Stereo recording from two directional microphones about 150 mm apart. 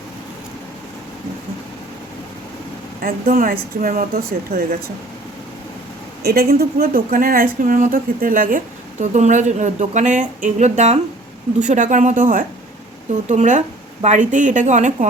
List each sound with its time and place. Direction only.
3.0 s speech: 75° right (ahead or behind); by 4.8 s 90° right
6.2 s speech: 90° right; by 14.9 s 55° right (ahead or behind)